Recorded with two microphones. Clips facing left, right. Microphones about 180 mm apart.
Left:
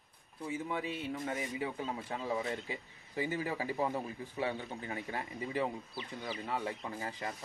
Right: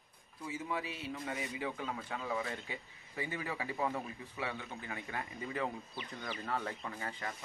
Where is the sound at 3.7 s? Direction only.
15° left (ahead or behind).